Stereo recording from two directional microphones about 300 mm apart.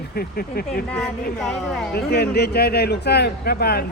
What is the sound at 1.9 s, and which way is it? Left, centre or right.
Speech, left.